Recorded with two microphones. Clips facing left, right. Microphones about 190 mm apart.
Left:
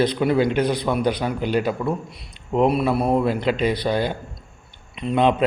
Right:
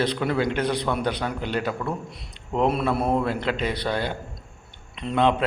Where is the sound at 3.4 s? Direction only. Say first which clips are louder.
Left 5 dB; 15° left (ahead or behind).